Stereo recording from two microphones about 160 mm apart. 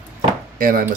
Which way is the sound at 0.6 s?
60° right (ahead or behind).